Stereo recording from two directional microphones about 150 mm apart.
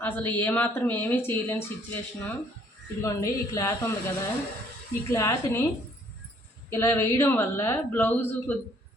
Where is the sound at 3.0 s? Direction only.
20° left (ahead or behind).